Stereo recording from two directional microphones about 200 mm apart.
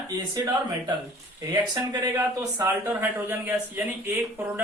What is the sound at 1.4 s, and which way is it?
Speech, 20° right (ahead or behind).